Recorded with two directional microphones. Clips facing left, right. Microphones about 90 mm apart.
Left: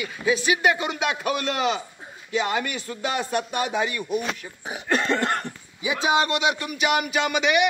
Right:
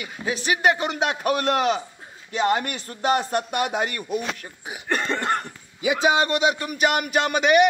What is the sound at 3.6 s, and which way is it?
Speech, 65° right (ahead or behind).